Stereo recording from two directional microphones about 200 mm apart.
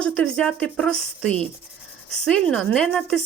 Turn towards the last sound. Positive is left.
turn(degrees=0)  # may be behind; listen again after turning